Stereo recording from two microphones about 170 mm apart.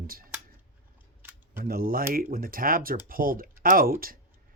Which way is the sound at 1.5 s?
60° right (ahead or behind).